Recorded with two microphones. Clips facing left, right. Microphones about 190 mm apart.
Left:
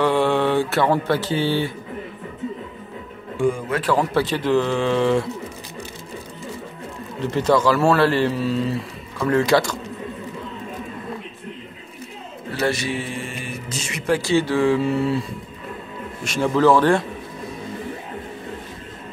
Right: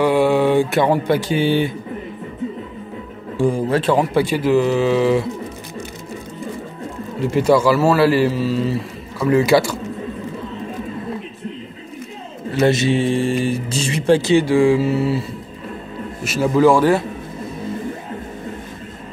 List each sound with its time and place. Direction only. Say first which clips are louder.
0.0 s a sound: right 4 dB; 10° right (ahead or behind)
3.3 s speech: right 4 dB; 35° right (ahead or behind)
3.9 s a man's voice: even; 15° right (ahead or behind)
7.2 s a man's voice: right 4 dB; 10° right (ahead or behind)
12.6 s speech: right 8 dB; 25° right (ahead or behind)
14.3 s a man's voice: right 2 dB; 10° right (ahead or behind)
16.3 s a man's voice: right 3 dB; 5° right (ahead or behind)